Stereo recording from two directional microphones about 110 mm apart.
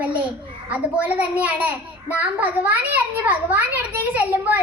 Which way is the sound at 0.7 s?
15° right (ahead or behind).